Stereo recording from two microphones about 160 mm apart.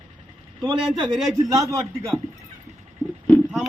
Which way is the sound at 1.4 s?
20° right (ahead or behind).